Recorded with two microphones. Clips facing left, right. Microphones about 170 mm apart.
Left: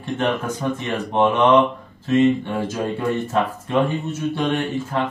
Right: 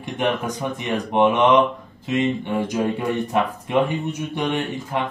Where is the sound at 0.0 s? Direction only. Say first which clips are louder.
Left 1 dB; 15° right (ahead or behind).